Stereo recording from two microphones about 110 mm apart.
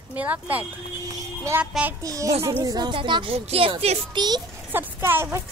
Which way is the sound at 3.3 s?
60° right (ahead or behind).